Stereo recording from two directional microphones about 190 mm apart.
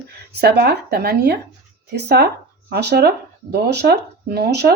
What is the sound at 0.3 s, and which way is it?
Speech, 60° right (ahead or behind).